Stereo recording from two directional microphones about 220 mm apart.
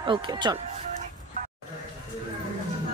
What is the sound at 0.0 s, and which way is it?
Speech, 20° right (ahead or behind).